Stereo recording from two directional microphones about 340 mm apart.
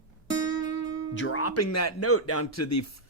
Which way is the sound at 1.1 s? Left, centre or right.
Left.